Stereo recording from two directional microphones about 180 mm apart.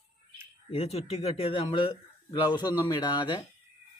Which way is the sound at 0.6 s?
35° left (ahead or behind).